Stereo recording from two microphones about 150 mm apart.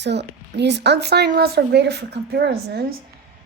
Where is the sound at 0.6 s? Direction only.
90° right.